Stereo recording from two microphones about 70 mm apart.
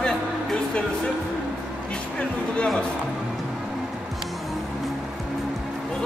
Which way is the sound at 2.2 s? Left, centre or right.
Centre.